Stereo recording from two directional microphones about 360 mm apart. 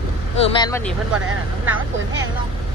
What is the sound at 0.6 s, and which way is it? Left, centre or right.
Speech, centre.